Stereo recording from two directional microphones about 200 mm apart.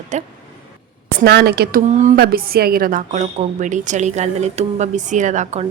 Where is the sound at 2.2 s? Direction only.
50° right (ahead or behind).